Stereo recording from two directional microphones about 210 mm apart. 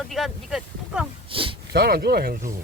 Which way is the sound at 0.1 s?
Centre (ahead or behind).